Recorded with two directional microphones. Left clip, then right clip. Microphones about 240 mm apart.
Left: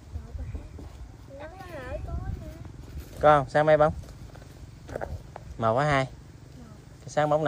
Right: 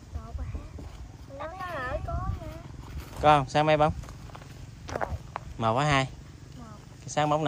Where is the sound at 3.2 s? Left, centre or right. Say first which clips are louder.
Left 2 dB; centre.